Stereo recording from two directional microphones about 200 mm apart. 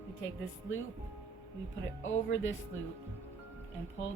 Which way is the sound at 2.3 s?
70° left (ahead or behind).